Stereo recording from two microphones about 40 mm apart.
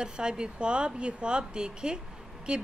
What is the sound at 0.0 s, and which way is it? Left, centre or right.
Speech, right.